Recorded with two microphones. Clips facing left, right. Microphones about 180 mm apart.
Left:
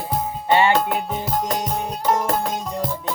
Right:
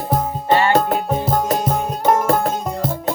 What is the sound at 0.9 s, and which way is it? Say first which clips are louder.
Music: right 5 dB; 45° right (ahead or behind).